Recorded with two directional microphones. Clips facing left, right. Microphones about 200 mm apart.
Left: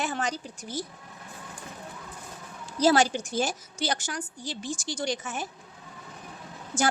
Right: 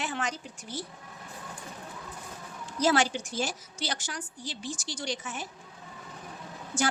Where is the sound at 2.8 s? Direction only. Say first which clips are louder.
Left 4 dB; 40° left (ahead or behind).